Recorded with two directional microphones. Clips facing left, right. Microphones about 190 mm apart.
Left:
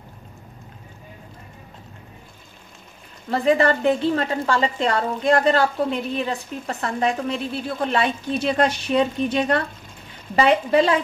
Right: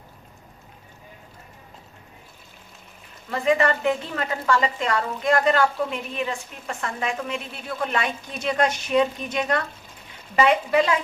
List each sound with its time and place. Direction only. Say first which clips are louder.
3.3 s a woman's voice: left 3 dB; 35° left (ahead or behind)